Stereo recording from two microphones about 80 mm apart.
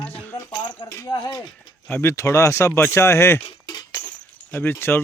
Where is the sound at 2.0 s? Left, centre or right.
Left.